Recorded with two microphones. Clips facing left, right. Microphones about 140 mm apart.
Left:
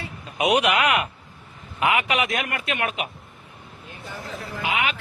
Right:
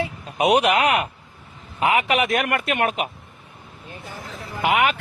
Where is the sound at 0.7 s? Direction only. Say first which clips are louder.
Right 2 dB; 40° right (ahead or behind).